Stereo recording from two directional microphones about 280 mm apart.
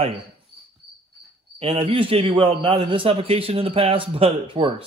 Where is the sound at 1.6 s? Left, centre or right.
Centre.